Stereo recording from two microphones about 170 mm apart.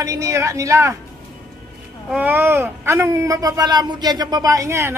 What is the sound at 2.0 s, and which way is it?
Speech, 10° right (ahead or behind).